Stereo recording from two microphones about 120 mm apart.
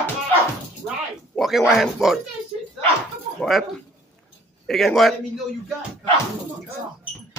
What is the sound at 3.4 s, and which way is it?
A man's voice, centre (ahead or behind).